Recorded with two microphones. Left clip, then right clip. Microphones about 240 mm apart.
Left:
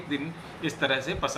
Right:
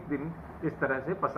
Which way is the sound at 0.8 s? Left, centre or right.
Left.